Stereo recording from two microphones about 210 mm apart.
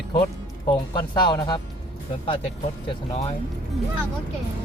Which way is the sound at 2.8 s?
30° left (ahead or behind).